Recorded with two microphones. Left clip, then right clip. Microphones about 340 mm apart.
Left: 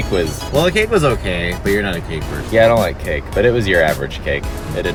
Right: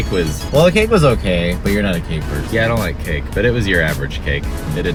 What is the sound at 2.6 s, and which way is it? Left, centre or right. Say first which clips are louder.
Speech: left 7 dB; centre.